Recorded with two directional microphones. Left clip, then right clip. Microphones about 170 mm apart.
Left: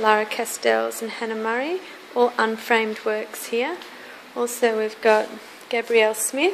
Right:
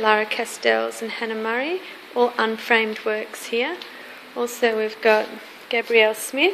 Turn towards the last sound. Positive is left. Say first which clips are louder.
# right 2 dB
turn(degrees=0)  # may be behind; listen again after turning